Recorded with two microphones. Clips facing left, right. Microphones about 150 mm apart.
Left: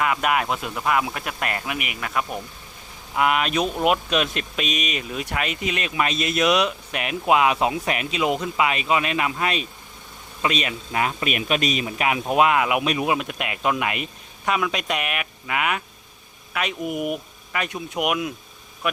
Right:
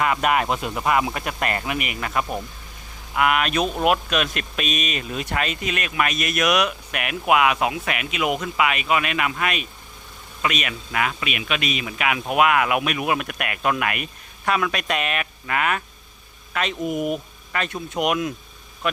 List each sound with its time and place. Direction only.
0.0 s speech: centre (ahead or behind)
3.2 s speech: 25° left (ahead or behind)
3.6 s speech: 20° right (ahead or behind)
3.8 s speech: 20° left (ahead or behind); by 18.3 s 5° left (ahead or behind)